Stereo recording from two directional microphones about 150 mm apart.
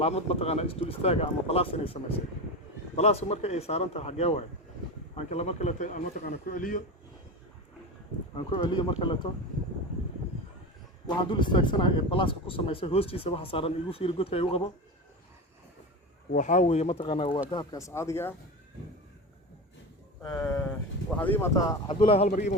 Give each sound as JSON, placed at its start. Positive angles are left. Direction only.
{"t": 0.0, "sound": "speech", "side_deg": 45}
{"t": 8.4, "sound": "speech", "side_deg": 30}
{"t": 11.0, "sound": "speech", "side_deg": 30}
{"t": 16.3, "sound": "speech", "side_deg": 55}
{"t": 20.2, "sound": "speech", "side_deg": 10}
{"t": 21.8, "sound": "speech", "side_deg": 40}
{"t": 22.3, "sound": "speech", "side_deg": 55}